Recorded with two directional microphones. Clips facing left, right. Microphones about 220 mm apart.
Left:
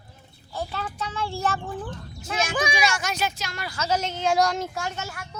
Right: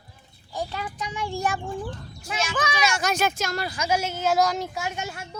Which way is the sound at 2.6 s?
15° left (ahead or behind).